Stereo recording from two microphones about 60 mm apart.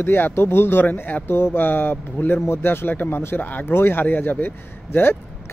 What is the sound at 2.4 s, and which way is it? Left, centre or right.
A man's voice, left.